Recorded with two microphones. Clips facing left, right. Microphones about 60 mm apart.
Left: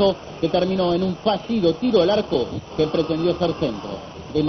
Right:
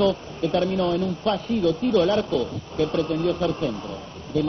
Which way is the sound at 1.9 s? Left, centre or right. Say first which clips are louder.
Left 2 dB; centre.